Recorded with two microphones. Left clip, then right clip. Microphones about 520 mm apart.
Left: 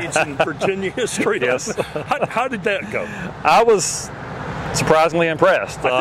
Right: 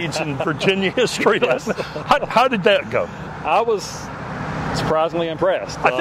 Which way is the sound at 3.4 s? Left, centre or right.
Left.